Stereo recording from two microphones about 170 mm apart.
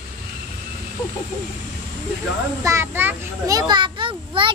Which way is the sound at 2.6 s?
15° right (ahead or behind).